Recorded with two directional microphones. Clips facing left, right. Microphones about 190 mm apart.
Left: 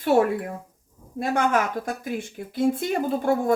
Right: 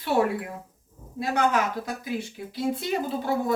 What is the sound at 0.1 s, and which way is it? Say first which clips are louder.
Speech: left 3 dB; 45° left (ahead or behind).